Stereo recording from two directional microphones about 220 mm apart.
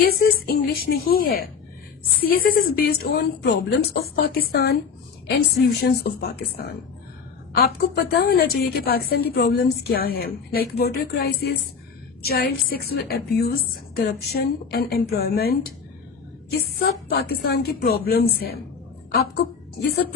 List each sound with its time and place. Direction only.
0.0 s a woman's voice: 45° left (ahead or behind)
7.5 s a woman's voice: 45° left (ahead or behind)